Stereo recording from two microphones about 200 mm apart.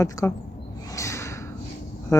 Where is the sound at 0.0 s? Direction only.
15° left (ahead or behind).